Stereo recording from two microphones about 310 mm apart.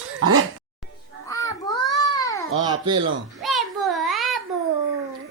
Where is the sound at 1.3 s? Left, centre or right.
Centre.